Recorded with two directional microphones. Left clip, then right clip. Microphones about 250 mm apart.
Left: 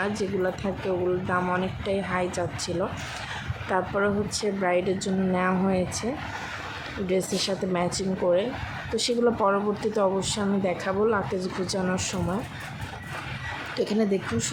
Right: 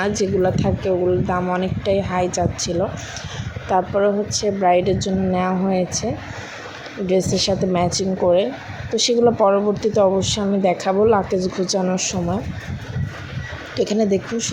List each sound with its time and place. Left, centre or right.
0.2 s speech: centre
7.1 s speech: centre
13.7 s speech: centre